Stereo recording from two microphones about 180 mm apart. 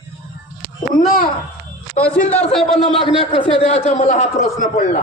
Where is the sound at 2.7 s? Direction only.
30° left (ahead or behind).